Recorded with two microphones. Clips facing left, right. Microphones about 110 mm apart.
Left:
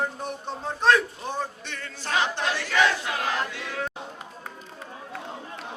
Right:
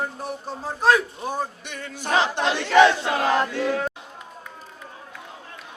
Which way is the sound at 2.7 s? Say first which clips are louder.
Right 9 dB; 35° right (ahead or behind).